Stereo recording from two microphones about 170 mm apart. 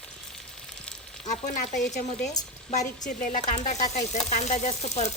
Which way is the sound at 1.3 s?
45° left (ahead or behind).